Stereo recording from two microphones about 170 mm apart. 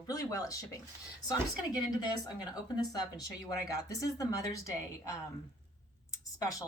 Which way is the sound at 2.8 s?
20° left (ahead or behind).